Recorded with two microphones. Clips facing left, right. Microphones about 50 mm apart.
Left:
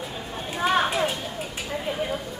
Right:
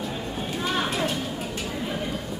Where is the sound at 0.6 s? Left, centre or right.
Centre.